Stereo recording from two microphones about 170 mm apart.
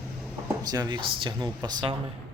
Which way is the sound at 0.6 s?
25° right (ahead or behind).